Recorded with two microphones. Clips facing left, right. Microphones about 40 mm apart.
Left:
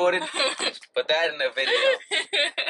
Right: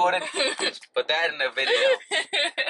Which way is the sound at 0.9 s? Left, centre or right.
Centre.